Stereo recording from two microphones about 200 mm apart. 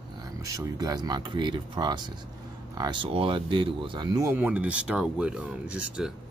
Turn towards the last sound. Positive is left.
turn(degrees=-5)  # may be behind; listen again after turning